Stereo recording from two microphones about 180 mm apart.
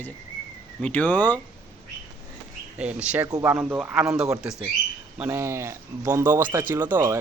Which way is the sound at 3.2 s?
20° right (ahead or behind).